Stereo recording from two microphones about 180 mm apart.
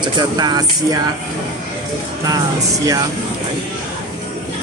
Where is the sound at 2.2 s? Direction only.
20° right (ahead or behind).